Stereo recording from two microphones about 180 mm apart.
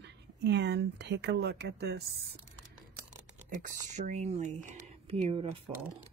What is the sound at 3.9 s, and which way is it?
Speech, 40° right (ahead or behind).